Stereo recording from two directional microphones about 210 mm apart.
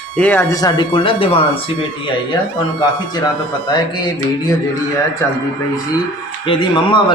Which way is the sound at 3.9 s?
20° left (ahead or behind).